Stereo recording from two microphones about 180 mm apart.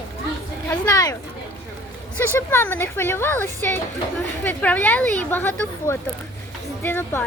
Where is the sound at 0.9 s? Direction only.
20° left (ahead or behind).